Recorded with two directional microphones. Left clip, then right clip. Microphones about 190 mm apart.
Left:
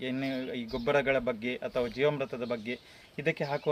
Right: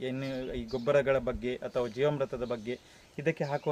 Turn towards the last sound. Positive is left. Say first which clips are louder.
# even
turn(degrees=-15)  # may be behind; listen again after turning